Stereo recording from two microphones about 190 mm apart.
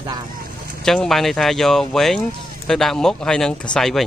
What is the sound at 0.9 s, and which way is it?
Speech, centre (ahead or behind).